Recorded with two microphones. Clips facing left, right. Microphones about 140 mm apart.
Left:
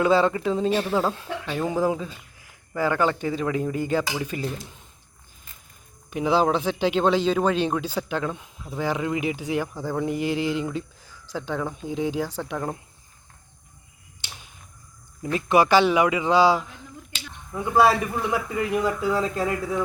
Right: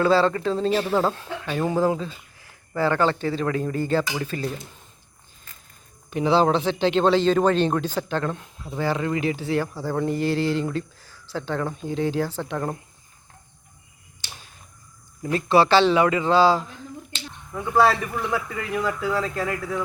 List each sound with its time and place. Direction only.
0.0 s speech: 15° left (ahead or behind)
6.1 s speech: 10° left (ahead or behind)
15.2 s speech: 15° left (ahead or behind)